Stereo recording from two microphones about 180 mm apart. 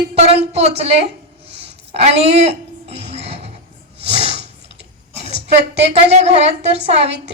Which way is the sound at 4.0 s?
35° right (ahead or behind).